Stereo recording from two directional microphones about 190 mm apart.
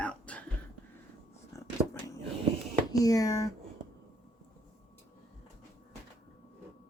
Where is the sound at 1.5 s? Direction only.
15° left (ahead or behind).